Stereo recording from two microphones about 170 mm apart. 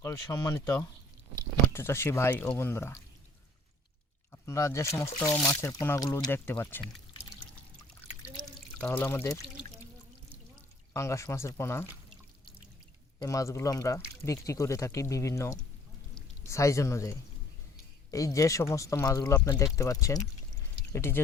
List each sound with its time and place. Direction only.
0.0 s speech: 15° left (ahead or behind)
4.3 s speech: 15° left (ahead or behind)
8.8 s speech: 10° left (ahead or behind)
10.9 s speech: 15° left (ahead or behind)
13.1 s speech: 20° left (ahead or behind)